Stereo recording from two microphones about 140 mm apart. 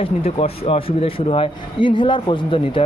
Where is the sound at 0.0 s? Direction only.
45° left (ahead or behind).